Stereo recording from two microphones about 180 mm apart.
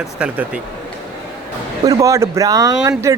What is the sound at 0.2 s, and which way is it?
Speech, 5° right (ahead or behind).